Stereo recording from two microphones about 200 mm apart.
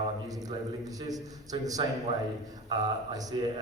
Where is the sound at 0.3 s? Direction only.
20° right (ahead or behind).